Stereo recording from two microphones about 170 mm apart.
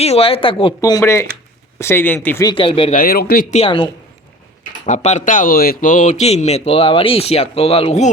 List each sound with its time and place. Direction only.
0.0 s a man's voice: 35° left (ahead or behind)
0.8 s speech: 20° left (ahead or behind)
2.5 s a man's voice: 30° left (ahead or behind)
2.9 s speech: 60° left (ahead or behind)
3.5 s a man's voice: 35° left (ahead or behind)
4.9 s a man's voice: 45° left (ahead or behind)